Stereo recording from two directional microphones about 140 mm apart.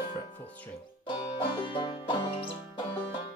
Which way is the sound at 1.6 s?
35° left (ahead or behind).